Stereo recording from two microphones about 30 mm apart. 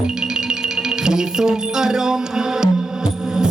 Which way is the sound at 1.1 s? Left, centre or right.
Right.